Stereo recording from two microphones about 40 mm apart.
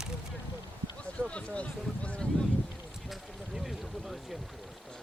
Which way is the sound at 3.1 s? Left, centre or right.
Centre.